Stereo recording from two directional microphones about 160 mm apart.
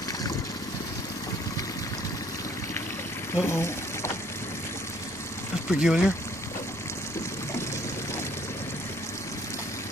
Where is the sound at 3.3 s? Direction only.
15° left (ahead or behind).